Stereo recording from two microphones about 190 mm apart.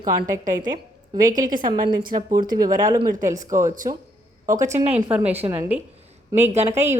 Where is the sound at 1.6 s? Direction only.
20° right (ahead or behind).